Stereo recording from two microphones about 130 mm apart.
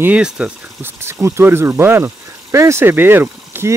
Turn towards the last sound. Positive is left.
turn(degrees=-15)  # may be behind; listen again after turning